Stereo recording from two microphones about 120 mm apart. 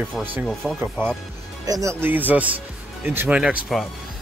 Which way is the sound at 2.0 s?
15° right (ahead or behind).